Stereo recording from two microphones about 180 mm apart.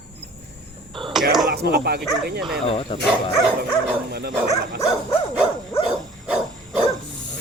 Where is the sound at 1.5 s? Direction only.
60° right (ahead or behind).